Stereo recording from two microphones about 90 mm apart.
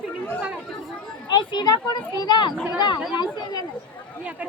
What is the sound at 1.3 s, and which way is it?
A child's voice, 55° left (ahead or behind).